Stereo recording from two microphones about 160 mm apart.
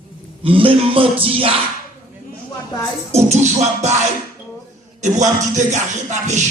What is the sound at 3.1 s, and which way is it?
Music, 45° right (ahead or behind).